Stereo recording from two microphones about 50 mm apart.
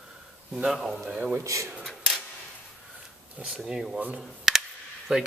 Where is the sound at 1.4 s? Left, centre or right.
Right.